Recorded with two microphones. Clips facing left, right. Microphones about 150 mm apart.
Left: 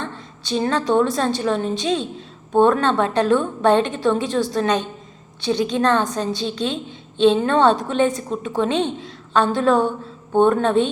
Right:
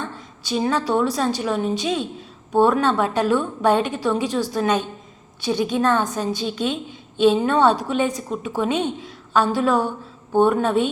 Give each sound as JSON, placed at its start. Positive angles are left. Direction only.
{"t": 0.5, "sound": "a woman's voice", "side_deg": -10}